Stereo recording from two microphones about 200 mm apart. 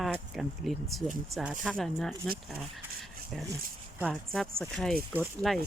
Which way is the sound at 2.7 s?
Centre (ahead or behind).